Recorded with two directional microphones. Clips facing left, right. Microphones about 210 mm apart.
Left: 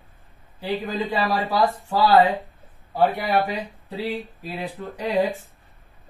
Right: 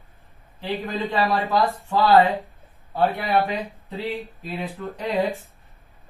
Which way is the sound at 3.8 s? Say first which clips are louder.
Left 3 dB; 15° left (ahead or behind).